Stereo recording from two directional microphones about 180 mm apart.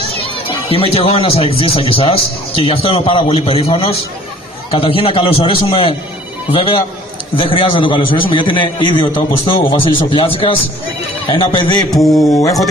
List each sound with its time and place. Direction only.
0.5 s a man's voice: 30° left (ahead or behind)
10.1 s a man's voice: 30° left (ahead or behind)
11.9 s speech: centre (ahead or behind)
12.4 s a sound: 20° left (ahead or behind)